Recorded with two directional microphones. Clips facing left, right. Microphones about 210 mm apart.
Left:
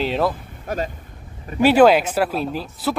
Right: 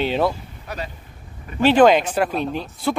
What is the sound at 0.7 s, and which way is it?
Speech, 50° left (ahead or behind).